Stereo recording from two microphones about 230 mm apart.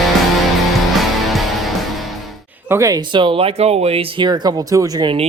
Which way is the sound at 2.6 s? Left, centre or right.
Centre.